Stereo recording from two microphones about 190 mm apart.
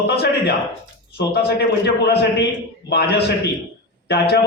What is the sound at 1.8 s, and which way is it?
A man's voice, 60° left (ahead or behind).